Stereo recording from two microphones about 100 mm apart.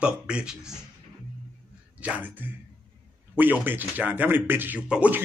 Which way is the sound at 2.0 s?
15° right (ahead or behind).